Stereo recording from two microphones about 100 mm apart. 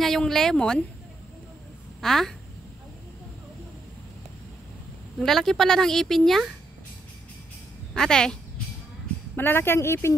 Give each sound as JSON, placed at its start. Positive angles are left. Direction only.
{"t": 0.0, "sound": "a woman's voice", "side_deg": 5}
{"t": 2.0, "sound": "speech", "side_deg": 5}
{"t": 5.2, "sound": "a woman's voice", "side_deg": 5}
{"t": 7.9, "sound": "a woman's voice", "side_deg": 5}
{"t": 9.3, "sound": "speech", "side_deg": 20}